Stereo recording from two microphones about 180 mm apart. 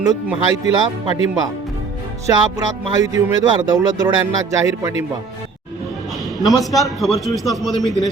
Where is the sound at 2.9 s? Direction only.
20° right (ahead or behind).